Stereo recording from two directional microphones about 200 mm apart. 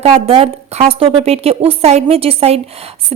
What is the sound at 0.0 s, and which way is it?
A woman's voice, 30° right (ahead or behind).